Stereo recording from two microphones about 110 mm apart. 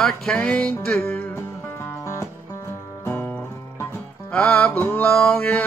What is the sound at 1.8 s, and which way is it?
Music, 25° left (ahead or behind).